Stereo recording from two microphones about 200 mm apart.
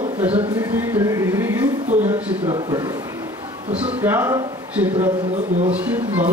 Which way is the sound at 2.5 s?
20° right (ahead or behind).